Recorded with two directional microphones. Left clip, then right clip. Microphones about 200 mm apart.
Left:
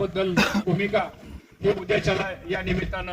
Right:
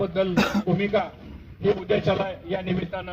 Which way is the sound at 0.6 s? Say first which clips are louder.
Even; 55° left (ahead or behind).